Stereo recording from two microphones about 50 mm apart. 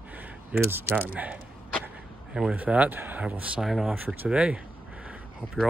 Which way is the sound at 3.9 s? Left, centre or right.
Right.